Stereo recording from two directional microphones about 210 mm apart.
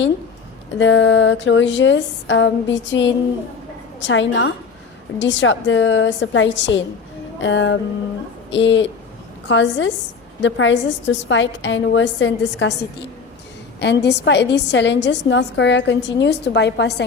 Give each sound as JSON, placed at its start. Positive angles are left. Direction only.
{"t": 0.8, "sound": "a woman's voice", "side_deg": 60}